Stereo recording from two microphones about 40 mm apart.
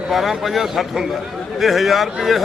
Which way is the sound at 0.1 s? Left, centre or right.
Centre.